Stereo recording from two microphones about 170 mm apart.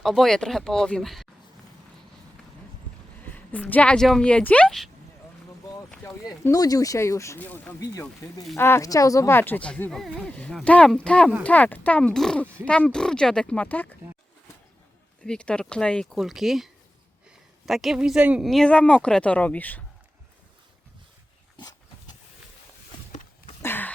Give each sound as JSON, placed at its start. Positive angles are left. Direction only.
{"t": 0.0, "sound": "speech", "side_deg": 0}
{"t": 3.3, "sound": "speech", "side_deg": 10}
{"t": 6.2, "sound": "speech", "side_deg": 20}
{"t": 15.2, "sound": "speech", "side_deg": 5}
{"t": 17.7, "sound": "speech", "side_deg": 0}
{"t": 21.5, "sound": "dog", "side_deg": 25}
{"t": 23.6, "sound": "a sound", "side_deg": 10}